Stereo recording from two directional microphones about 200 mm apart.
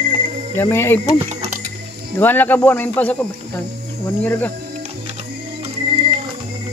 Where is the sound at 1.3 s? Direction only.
35° right (ahead or behind).